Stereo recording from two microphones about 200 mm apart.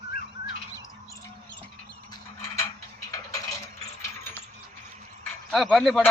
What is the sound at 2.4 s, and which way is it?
Mechanisms, 15° left (ahead or behind).